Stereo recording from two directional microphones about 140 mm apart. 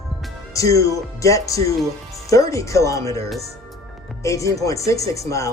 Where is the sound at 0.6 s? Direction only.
25° left (ahead or behind).